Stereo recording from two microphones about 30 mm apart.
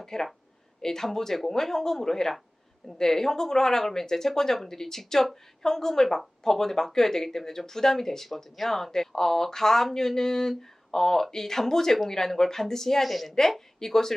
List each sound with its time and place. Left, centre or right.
0.0 s speech: centre
13.7 s speech: centre